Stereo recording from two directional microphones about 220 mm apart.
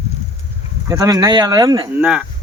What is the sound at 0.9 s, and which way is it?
Speech, 15° right (ahead or behind).